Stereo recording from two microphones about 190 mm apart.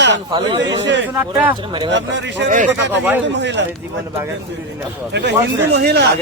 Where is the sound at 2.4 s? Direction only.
40° right (ahead or behind).